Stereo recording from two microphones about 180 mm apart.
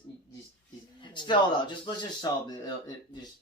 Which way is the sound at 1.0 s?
25° left (ahead or behind).